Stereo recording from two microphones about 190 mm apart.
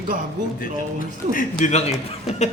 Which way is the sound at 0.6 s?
45° left (ahead or behind).